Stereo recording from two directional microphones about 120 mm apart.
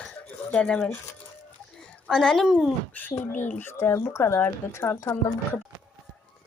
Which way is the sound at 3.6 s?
20° left (ahead or behind).